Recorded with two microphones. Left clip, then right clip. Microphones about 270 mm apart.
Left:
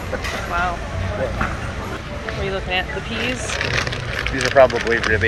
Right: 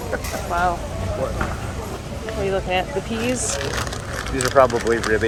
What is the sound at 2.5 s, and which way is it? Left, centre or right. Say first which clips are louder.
Speech: right 1 dB; centre.